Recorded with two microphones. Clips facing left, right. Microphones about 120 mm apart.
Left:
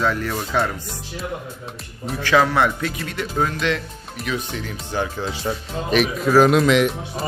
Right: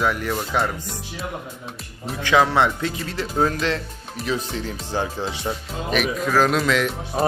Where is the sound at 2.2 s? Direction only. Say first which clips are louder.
Even; 20° right (ahead or behind).